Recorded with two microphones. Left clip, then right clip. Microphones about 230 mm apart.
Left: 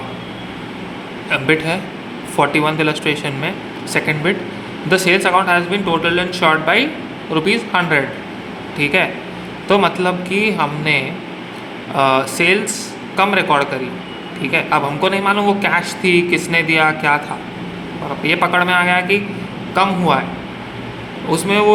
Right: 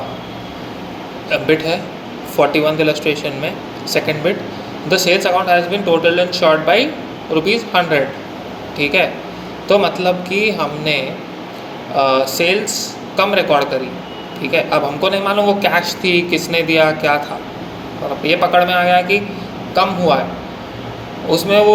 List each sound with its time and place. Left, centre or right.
1.3 s a man's voice: left
12.0 s a man's voice: left
18.2 s a man's voice: centre
21.2 s a man's voice: left